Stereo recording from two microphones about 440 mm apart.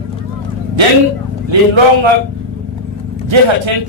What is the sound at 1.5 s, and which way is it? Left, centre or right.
Speech, right.